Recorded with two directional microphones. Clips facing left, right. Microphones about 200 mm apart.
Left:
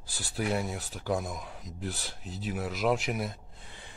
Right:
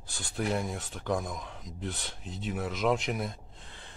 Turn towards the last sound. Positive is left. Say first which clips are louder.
# even
turn(degrees=5)  # may be behind; listen again after turning